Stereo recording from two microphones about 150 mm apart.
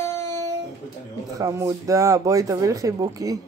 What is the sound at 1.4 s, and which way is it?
Speech, 20° right (ahead or behind).